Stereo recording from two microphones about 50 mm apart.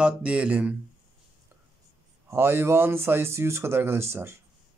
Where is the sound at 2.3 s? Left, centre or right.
Right.